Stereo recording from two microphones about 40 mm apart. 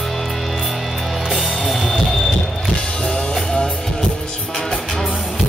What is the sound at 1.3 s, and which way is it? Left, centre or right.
Music, centre.